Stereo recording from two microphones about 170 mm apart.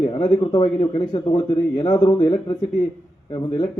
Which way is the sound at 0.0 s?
30° left (ahead or behind).